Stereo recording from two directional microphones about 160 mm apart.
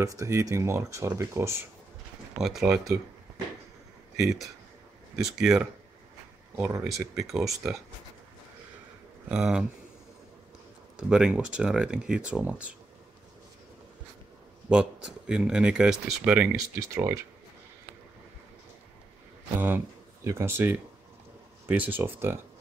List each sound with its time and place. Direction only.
0.0 s speech: 20° right (ahead or behind)
2.3 s speech: 5° right (ahead or behind)
4.2 s speech: centre (ahead or behind)
6.5 s speech: 15° right (ahead or behind)
6.8 s speech: 5° right (ahead or behind)
9.3 s speech: 5° right (ahead or behind)
11.0 s speech: 5° right (ahead or behind)
14.7 s speech: 5° right (ahead or behind)
16.5 s speech: 20° right (ahead or behind)
20.2 s speech: 15° right (ahead or behind)